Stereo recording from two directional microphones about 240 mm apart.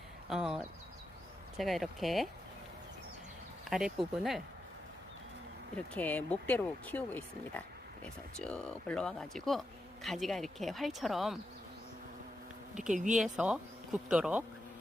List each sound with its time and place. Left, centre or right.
0.3 s speech: centre
3.7 s speech: centre
5.7 s speech: centre
12.9 s speech: right
13.1 s speech: centre